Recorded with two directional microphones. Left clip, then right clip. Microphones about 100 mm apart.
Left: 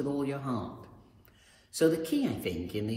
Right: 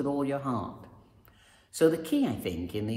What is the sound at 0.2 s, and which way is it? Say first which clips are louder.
Speech: right 3 dB; 25° right (ahead or behind).